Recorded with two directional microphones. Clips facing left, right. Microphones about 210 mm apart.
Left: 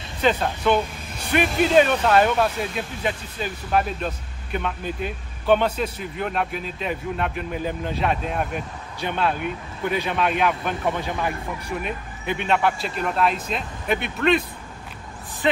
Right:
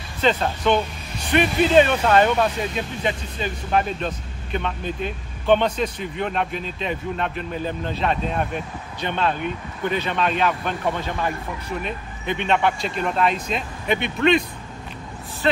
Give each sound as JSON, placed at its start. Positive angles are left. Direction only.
{"t": 0.2, "sound": "speech", "side_deg": 5}
{"t": 15.4, "sound": "speech", "side_deg": 15}